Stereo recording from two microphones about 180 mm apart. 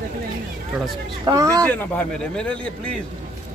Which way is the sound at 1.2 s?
15° right (ahead or behind).